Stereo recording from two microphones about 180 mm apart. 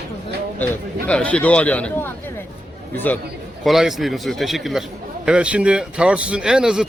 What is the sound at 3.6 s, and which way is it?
Speech, centre (ahead or behind).